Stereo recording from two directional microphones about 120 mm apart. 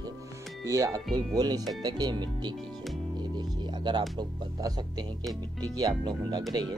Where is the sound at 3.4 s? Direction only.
35° right (ahead or behind).